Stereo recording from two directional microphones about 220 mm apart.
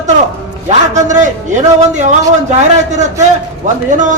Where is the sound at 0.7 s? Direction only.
35° right (ahead or behind).